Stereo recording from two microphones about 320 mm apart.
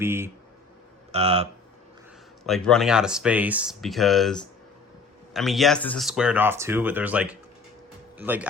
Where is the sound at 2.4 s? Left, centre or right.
Centre.